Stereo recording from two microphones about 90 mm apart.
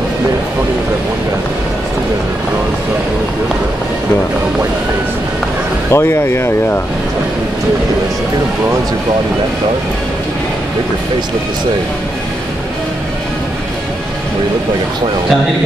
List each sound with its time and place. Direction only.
5.9 s speech: 25° left (ahead or behind)